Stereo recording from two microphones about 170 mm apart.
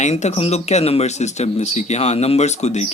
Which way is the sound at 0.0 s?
40° left (ahead or behind).